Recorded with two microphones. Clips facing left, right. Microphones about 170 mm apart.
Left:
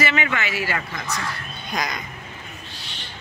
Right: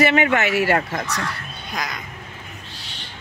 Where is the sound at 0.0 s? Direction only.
55° right (ahead or behind).